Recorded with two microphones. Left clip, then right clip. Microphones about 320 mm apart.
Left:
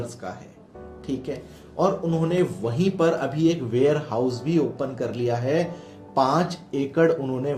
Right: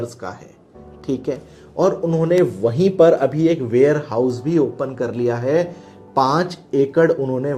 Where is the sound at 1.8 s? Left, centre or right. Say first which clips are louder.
Right 5 dB; right.